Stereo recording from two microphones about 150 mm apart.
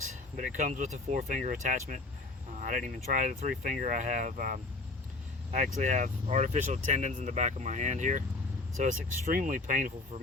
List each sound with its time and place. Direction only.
0.0 s speech: 55° right (ahead or behind)
5.5 s speech: 55° right (ahead or behind)